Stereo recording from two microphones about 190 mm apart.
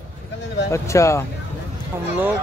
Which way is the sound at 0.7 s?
15° left (ahead or behind).